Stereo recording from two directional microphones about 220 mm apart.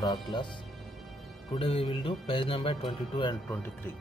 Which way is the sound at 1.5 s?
25° left (ahead or behind).